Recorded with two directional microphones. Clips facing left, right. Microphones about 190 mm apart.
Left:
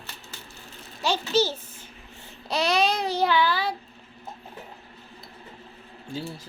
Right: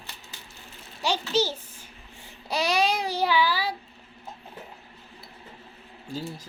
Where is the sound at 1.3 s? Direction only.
10° right (ahead or behind).